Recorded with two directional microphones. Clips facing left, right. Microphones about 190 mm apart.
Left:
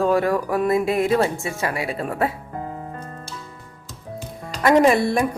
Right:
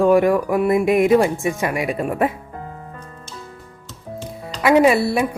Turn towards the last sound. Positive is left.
turn(degrees=-5)  # may be behind; listen again after turning